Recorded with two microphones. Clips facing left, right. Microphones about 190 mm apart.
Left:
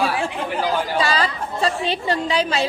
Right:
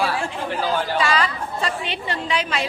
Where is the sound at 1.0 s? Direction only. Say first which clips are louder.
Left 1 dB; 35° left (ahead or behind).